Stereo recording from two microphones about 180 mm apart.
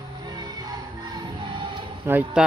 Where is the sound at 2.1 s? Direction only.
10° right (ahead or behind).